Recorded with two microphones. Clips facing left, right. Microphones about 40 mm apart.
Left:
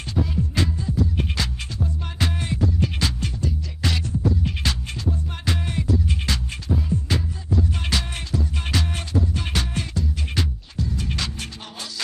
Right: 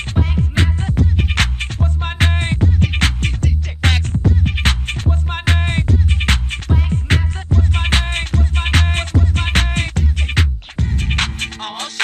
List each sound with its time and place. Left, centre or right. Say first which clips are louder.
0.1 s music: right 3 dB; right